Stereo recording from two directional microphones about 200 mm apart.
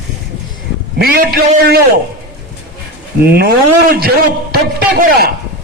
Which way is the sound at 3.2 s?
55° right (ahead or behind).